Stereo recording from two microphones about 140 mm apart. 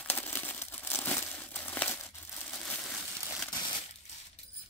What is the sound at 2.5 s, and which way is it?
Crushing, 5° left (ahead or behind).